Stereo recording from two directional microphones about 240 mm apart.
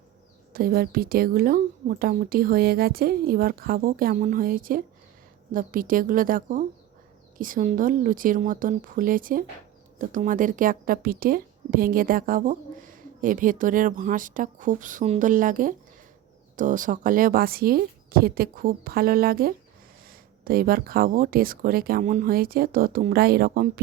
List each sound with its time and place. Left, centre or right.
0.5 s a woman's voice: right